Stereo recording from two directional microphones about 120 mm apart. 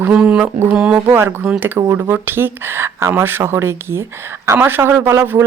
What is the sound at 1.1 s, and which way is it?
A man's voice, 20° right (ahead or behind).